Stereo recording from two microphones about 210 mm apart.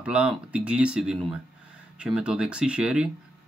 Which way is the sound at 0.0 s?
5° right (ahead or behind).